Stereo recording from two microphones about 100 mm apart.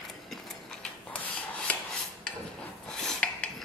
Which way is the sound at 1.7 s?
15° left (ahead or behind).